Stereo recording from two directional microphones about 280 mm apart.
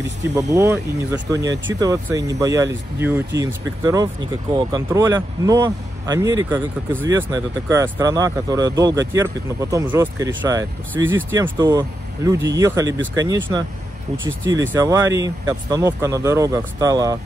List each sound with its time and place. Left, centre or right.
0.2 s speech: centre
14.1 s speech: right
14.7 s speech: centre